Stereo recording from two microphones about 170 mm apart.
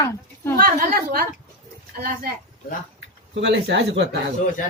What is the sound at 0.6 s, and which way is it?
A woman's voice, 55° right (ahead or behind).